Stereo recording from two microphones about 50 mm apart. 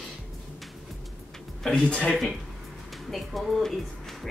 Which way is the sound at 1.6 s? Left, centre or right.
Centre.